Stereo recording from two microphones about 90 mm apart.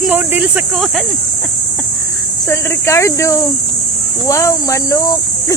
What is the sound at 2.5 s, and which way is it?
Speech, 30° left (ahead or behind).